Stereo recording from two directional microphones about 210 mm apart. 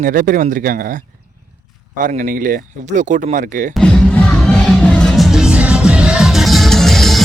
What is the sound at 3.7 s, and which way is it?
Music, 5° left (ahead or behind).